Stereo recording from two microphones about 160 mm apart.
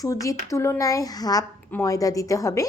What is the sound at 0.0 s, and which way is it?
A woman's voice, 20° left (ahead or behind).